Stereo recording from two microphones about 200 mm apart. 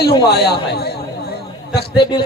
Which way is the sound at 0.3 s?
55° left (ahead or behind).